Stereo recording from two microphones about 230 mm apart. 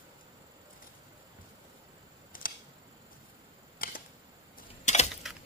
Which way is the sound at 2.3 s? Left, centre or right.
Left.